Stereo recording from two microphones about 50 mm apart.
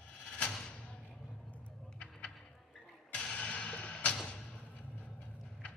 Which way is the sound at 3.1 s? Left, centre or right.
Left.